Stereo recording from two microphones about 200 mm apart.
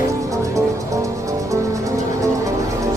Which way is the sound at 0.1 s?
15° right (ahead or behind).